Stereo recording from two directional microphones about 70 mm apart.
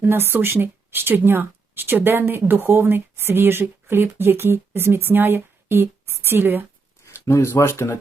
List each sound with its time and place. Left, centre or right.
0.0 s a woman's voice: right
7.0 s a sound: left
7.5 s speech: left